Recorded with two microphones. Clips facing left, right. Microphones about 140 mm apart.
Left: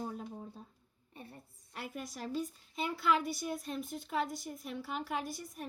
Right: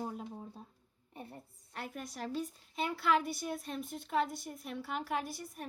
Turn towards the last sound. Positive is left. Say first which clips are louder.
# right 1 dB
turn(degrees=0)  # may be behind; listen again after turning